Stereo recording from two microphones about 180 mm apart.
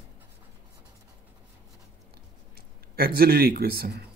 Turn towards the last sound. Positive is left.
turn(degrees=-60)  # may be behind; listen again after turning